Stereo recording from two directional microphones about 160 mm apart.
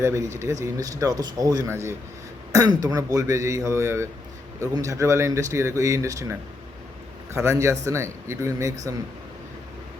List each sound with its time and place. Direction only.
0.0 s a man's voice: 20° right (ahead or behind)
7.3 s speech: 20° right (ahead or behind)